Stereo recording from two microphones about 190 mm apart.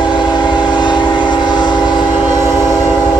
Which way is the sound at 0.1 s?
25° left (ahead or behind).